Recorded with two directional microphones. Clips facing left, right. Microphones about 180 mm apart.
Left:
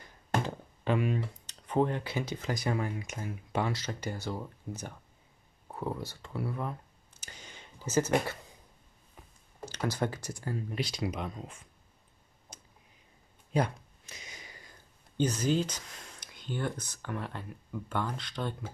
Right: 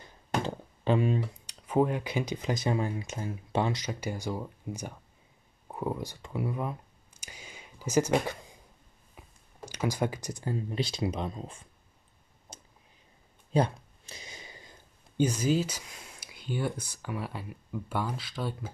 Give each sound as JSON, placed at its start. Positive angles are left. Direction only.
{"t": 0.8, "sound": "speech", "side_deg": -30}
{"t": 1.4, "sound": "speech", "side_deg": -10}
{"t": 3.7, "sound": "speech", "side_deg": -15}
{"t": 7.2, "sound": "a sound", "side_deg": -10}
{"t": 9.7, "sound": "speech", "side_deg": -10}
{"t": 12.5, "sound": "a sound", "side_deg": -25}
{"t": 15.1, "sound": "speech", "side_deg": -10}